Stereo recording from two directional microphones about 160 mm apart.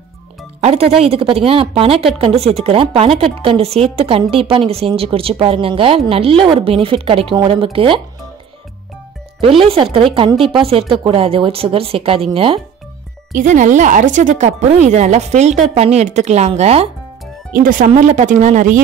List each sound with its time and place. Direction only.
0.6 s speech: 40° right (ahead or behind)
9.4 s speech: 35° right (ahead or behind)
13.3 s speech: 55° right (ahead or behind)
17.5 s speech: 60° right (ahead or behind)